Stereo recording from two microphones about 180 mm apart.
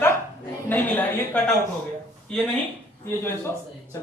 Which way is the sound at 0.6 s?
10° left (ahead or behind).